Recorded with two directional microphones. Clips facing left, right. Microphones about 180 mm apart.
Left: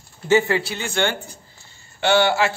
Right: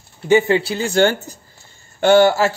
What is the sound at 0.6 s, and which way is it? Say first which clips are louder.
Speech: right 7 dB; 35° right (ahead or behind).